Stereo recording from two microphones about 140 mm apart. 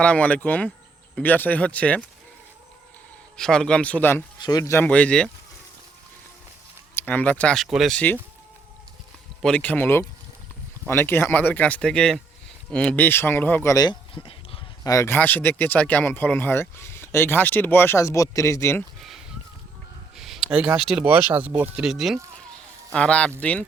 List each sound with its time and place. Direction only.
0.0 s speech: 10° left (ahead or behind)
3.3 s speech: 5° left (ahead or behind)
4.4 s speech: 30° left (ahead or behind)
4.9 s speech: 10° left (ahead or behind)
6.9 s speech: 10° left (ahead or behind)
7.9 s speech: 10° left (ahead or behind)
9.4 s speech: 10° left (ahead or behind)
13.7 s speech: 30° left (ahead or behind)
14.8 s speech: 20° left (ahead or behind)
20.1 s a sound: centre (ahead or behind)
20.5 s speech: 5° right (ahead or behind)
22.9 s speech: 10° left (ahead or behind)